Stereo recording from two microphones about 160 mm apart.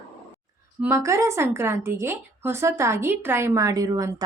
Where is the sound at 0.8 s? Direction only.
15° right (ahead or behind).